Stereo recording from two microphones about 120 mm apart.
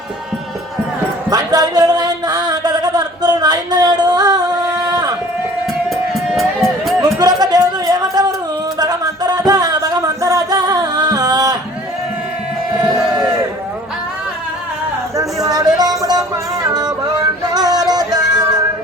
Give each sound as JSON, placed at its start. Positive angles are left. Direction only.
{"t": 1.3, "sound": "a sound", "side_deg": -35}
{"t": 5.9, "sound": "music", "side_deg": 0}
{"t": 7.0, "sound": "music", "side_deg": -35}
{"t": 15.1, "sound": "music", "side_deg": -30}